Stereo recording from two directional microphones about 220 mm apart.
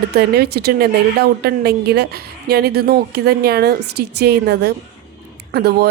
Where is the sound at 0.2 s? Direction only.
45° right (ahead or behind).